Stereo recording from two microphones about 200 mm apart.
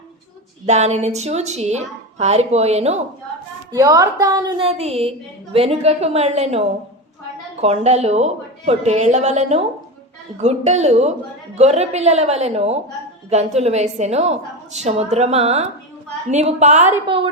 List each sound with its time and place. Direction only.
0.6 s a woman's voice: 35° right (ahead or behind)
3.7 s a woman's voice: 15° right (ahead or behind); by 16.9 s 35° right (ahead or behind)